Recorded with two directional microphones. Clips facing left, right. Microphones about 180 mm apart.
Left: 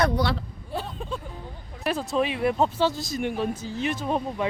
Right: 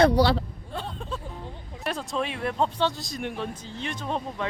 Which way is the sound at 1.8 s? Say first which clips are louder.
Left 4 dB; 5° left (ahead or behind).